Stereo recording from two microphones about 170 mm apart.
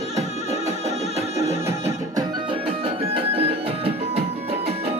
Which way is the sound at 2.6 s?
35° right (ahead or behind).